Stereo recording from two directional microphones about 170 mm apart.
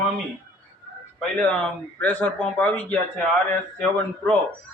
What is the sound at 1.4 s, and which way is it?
Speech, 5° left (ahead or behind).